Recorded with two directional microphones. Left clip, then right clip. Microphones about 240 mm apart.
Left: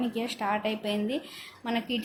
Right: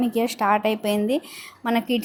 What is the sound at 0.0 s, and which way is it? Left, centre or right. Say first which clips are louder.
Speech: right 9 dB; right.